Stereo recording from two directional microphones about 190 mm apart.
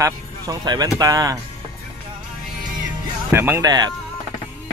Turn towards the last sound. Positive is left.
turn(degrees=-20)  # may be behind; listen again after turning